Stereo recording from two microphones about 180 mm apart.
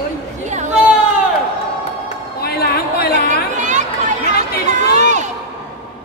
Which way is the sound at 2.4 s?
60° left (ahead or behind).